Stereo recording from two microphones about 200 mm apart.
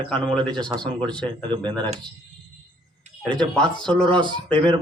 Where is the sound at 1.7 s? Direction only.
20° right (ahead or behind).